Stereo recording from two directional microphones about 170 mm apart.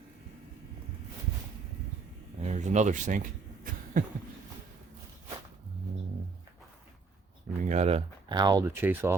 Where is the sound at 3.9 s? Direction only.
55° right (ahead or behind).